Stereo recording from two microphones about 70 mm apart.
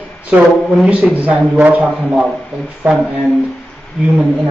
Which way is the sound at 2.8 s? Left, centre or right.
Right.